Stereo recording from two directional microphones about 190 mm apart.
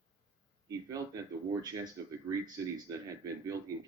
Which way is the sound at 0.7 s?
15° right (ahead or behind).